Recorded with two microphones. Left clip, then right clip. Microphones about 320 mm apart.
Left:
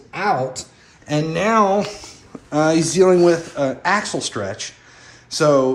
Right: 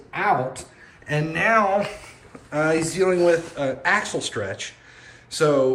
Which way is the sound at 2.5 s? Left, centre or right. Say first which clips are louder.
Left 4 dB; centre.